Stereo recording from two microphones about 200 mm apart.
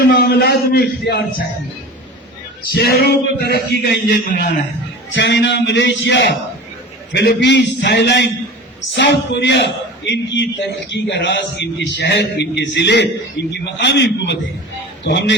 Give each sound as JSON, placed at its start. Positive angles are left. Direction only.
{"t": 0.0, "sound": "a man's voice", "side_deg": 50}
{"t": 2.7, "sound": "a man's voice", "side_deg": 50}
{"t": 5.1, "sound": "a man's voice", "side_deg": 60}